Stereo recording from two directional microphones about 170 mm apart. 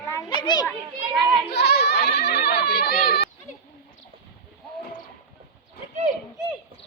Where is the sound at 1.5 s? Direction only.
85° left.